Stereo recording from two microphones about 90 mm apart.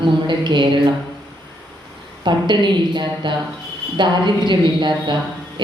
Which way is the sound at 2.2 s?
60° right (ahead or behind).